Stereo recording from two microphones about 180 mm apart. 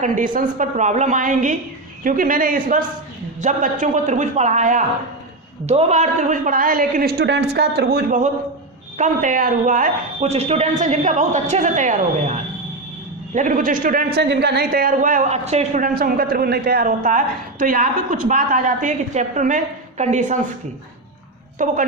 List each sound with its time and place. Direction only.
0.3 s a man's voice: 45° right (ahead or behind)
9.0 s a man's voice: 45° right (ahead or behind)
21.6 s a man's voice: 45° right (ahead or behind)